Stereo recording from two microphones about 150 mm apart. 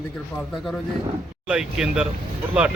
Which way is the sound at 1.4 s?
5° right (ahead or behind).